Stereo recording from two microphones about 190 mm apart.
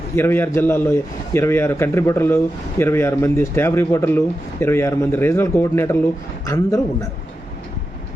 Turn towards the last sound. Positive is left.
turn(degrees=15)  # may be behind; listen again after turning